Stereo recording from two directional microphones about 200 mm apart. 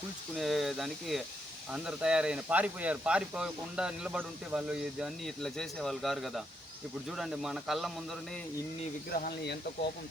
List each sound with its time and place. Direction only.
0.3 s speech: centre (ahead or behind)
9.0 s speech: 45° left (ahead or behind)